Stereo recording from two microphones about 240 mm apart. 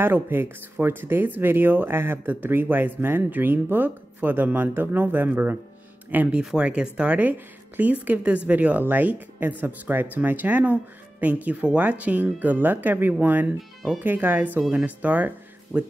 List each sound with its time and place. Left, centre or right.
0.0 s speech: centre